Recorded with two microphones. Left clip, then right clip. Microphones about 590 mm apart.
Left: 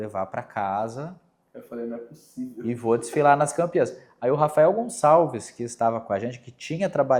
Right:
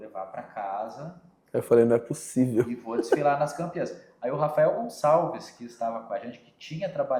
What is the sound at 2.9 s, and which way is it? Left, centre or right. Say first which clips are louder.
Speech: left 6 dB; left.